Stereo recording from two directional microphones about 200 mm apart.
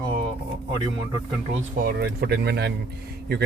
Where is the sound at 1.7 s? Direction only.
50° right (ahead or behind).